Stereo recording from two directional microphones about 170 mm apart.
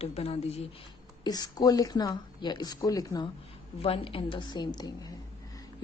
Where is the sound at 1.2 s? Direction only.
25° left (ahead or behind).